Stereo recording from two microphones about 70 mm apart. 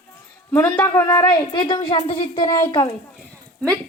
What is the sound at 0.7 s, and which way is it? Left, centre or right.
Speech, left.